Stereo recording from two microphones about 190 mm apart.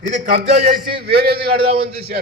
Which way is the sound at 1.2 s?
55° right (ahead or behind).